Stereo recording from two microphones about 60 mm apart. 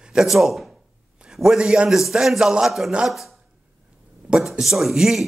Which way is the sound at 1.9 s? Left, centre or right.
Centre.